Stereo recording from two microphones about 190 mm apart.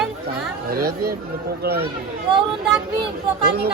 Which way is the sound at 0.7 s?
50° right (ahead or behind).